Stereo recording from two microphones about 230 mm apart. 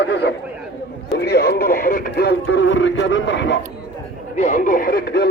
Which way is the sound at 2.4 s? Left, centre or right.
Left.